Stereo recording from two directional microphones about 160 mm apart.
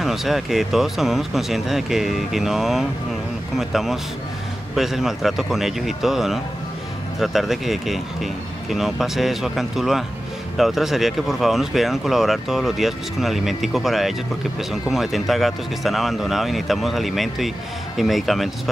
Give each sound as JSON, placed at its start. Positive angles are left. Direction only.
{"t": 0.0, "sound": "speech", "side_deg": 0}